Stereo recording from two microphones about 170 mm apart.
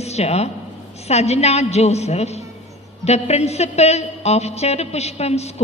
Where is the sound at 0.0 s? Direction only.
40° left (ahead or behind).